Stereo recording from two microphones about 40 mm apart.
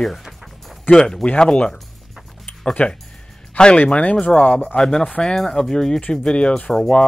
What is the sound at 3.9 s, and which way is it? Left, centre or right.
Speech, left.